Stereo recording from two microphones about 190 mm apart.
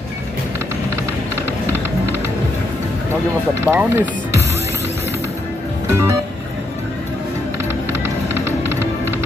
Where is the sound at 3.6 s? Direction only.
10° right (ahead or behind).